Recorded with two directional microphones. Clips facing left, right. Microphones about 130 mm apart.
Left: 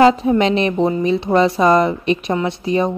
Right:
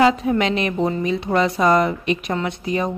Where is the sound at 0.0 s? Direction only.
30° left (ahead or behind).